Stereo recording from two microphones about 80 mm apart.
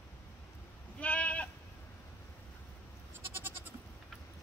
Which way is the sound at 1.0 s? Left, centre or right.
Centre.